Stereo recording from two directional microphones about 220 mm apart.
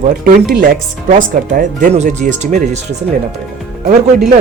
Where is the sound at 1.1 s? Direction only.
35° right (ahead or behind).